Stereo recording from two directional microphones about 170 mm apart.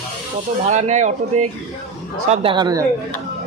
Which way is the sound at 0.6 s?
45° right (ahead or behind).